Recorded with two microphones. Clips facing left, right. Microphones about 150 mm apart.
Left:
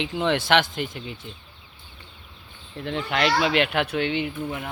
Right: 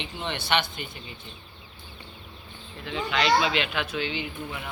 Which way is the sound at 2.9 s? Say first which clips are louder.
Left 1 dB; 60° left (ahead or behind).